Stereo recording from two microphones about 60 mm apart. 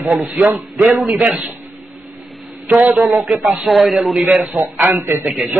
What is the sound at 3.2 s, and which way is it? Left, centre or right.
Speech, centre.